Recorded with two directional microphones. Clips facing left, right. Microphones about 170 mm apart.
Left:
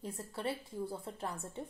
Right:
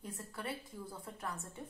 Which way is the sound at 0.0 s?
30° left (ahead or behind).